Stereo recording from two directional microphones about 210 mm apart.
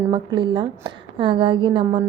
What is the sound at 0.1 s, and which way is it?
A woman's voice, 20° right (ahead or behind).